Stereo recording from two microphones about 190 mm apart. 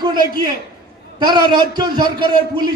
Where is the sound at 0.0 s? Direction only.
20° right (ahead or behind).